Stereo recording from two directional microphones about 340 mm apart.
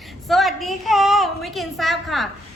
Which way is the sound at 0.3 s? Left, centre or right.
Centre.